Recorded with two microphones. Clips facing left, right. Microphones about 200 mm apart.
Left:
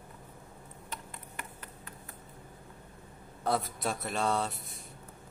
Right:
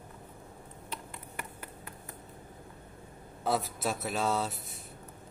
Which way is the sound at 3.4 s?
5° right (ahead or behind).